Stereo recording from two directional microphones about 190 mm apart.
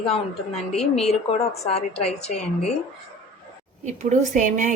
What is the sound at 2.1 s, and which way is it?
Speech, 35° left (ahead or behind).